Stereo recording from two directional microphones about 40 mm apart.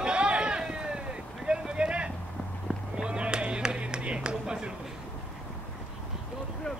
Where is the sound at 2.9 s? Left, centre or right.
Right.